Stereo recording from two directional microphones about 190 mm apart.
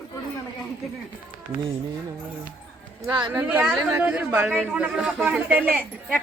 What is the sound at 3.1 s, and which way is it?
Speech, 25° right (ahead or behind).